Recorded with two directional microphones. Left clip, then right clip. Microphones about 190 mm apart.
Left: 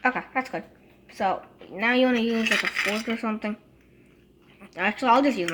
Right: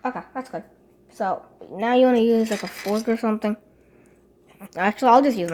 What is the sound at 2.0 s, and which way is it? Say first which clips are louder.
Speech: right 10 dB; 50° right (ahead or behind).